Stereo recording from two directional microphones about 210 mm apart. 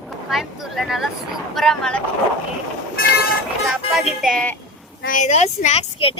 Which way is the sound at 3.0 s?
50° left (ahead or behind).